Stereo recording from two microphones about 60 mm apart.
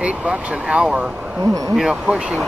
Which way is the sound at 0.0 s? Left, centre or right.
Centre.